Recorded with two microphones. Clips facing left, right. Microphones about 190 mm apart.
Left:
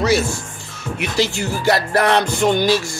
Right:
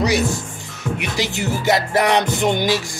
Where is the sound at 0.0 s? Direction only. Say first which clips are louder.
Left 1 dB; 15° right (ahead or behind).